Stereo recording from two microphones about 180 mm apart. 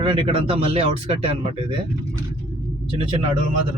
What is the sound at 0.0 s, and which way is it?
Speech, 30° right (ahead or behind).